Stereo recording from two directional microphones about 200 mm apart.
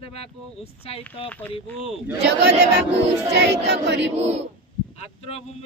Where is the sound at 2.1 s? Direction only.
55° right (ahead or behind).